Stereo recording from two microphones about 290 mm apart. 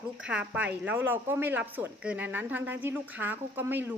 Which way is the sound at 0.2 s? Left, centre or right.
Centre.